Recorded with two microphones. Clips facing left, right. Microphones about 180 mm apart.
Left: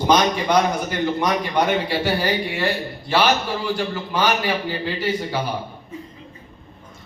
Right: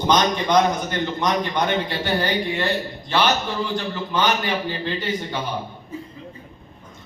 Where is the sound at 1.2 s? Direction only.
10° left (ahead or behind).